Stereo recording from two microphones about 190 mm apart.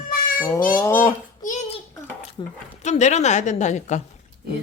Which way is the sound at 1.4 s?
40° left (ahead or behind).